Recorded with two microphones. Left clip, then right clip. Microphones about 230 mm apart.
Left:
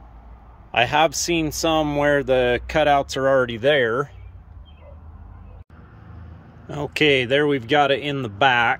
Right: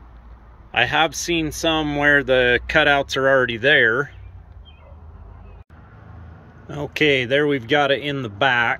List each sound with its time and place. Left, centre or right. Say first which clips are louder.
0.7 s speech: even; centre
6.7 s speech: even; centre